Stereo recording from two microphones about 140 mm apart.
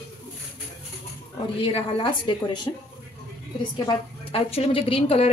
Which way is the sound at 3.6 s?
40° left (ahead or behind).